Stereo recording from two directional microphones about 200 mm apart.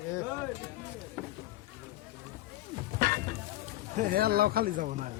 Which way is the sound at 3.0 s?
40° right (ahead or behind).